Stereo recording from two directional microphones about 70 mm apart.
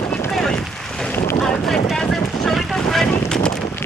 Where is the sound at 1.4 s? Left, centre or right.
Centre.